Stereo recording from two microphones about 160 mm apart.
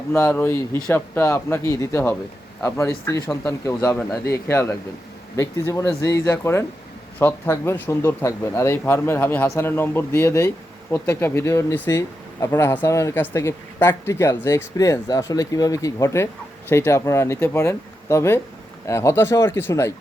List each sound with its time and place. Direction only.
0.1 s speech: 15° left (ahead or behind)